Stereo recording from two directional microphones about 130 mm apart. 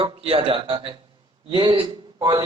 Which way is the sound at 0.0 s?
45° right (ahead or behind).